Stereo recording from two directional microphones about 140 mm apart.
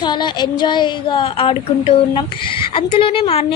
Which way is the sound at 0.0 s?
35° left (ahead or behind).